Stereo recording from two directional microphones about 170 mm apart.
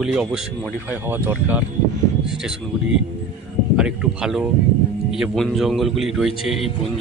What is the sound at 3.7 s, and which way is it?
A man's voice, 5° right (ahead or behind).